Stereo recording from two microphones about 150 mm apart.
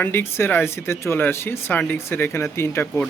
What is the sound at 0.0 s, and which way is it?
Speech, 15° left (ahead or behind).